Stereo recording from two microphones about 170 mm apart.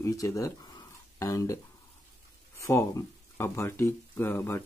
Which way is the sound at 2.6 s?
15° left (ahead or behind).